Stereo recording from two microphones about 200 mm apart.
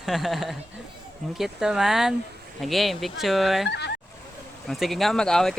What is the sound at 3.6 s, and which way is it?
Fowl, 60° left (ahead or behind).